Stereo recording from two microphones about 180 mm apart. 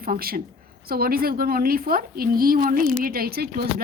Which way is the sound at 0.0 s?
55° right (ahead or behind).